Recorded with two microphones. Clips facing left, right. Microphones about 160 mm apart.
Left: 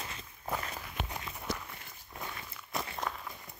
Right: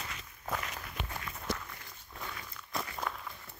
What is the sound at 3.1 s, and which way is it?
Run, 5° left (ahead or behind).